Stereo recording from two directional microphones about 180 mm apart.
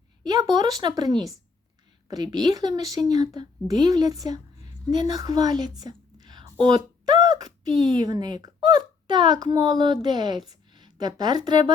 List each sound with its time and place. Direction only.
0.3 s a woman's voice: 20° right (ahead or behind)